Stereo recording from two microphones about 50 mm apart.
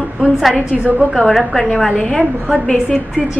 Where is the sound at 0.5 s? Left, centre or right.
Right.